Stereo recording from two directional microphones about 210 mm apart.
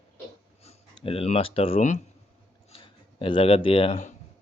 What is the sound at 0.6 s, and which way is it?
A man's voice, 30° left (ahead or behind).